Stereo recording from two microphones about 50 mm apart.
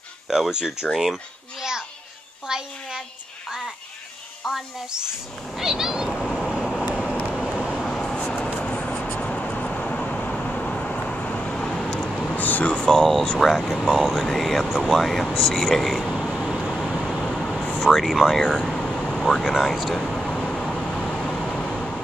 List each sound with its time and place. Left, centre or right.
0.3 s a child's voice: centre
2.4 s a sound: centre
4.4 s speech: centre
5.6 s cat: centre
6.0 s cat: centre
7.7 s vehicle: centre
12.4 s air conditioning: left
12.6 s speech: left
13.4 s speech: centre
16.5 s vehicle: centre
17.7 s speech: centre
20.0 s vehicle: centre
20.6 s vehicle: centre
20.9 s vehicle: centre